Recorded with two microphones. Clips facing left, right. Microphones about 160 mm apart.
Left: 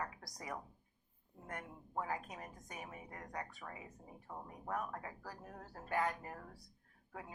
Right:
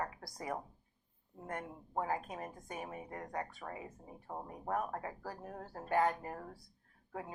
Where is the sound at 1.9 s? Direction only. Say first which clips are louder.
Right 4 dB; 45° right (ahead or behind).